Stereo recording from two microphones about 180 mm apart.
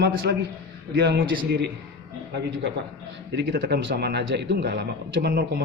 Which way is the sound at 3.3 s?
70° right (ahead or behind).